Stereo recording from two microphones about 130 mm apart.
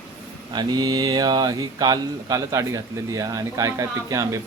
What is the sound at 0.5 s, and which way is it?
A man's voice, 30° right (ahead or behind).